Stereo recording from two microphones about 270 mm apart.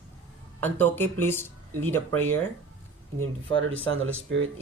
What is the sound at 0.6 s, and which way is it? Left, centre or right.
Speech, centre.